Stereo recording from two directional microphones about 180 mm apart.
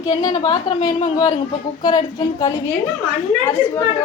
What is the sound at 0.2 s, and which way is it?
A woman's voice, 25° left (ahead or behind).